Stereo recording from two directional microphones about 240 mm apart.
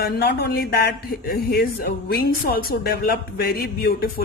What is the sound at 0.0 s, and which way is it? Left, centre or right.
Speech, left.